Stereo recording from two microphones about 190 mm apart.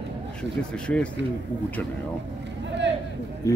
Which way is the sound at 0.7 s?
5° left (ahead or behind).